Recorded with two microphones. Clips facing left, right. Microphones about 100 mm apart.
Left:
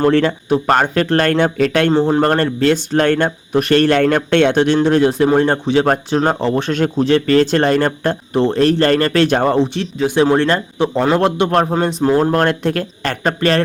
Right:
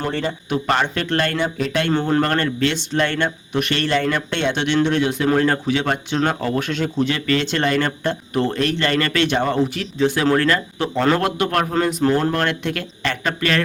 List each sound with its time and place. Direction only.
0.0 s speech: 85° left
0.4 s speech: 40° left (ahead or behind); by 1.9 s 65° left (ahead or behind)
1.9 s speech: 25° left (ahead or behind)
2.2 s speech: 35° left (ahead or behind); by 4.6 s 55° left (ahead or behind)
4.6 s speech: 35° left (ahead or behind)
6.7 s speech: 50° left (ahead or behind)
7.0 s speech: 35° left (ahead or behind)
10.3 s speech: 25° left (ahead or behind)